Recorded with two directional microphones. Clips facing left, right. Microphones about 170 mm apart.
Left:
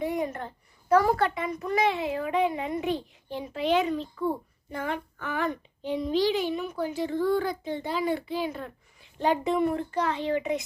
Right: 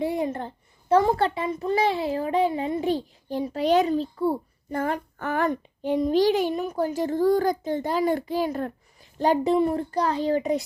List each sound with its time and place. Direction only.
0.0 s a child's voice: 30° right (ahead or behind)